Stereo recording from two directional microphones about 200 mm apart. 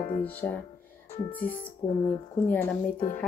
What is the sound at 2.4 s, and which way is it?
Speech, 10° left (ahead or behind).